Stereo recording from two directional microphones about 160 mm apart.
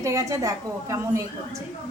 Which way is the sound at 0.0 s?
20° right (ahead or behind).